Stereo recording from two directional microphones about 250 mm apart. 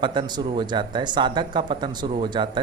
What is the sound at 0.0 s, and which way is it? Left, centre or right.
Speech, centre.